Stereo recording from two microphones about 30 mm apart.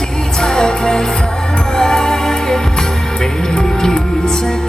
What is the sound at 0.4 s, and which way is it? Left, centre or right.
Music, left.